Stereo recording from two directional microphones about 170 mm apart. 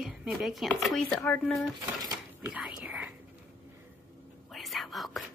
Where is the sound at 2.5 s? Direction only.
10° right (ahead or behind).